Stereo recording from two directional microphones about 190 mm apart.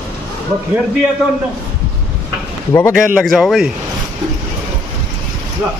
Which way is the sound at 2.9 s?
Centre (ahead or behind).